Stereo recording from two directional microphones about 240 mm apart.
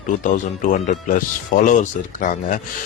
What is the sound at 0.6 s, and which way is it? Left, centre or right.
Speech, left.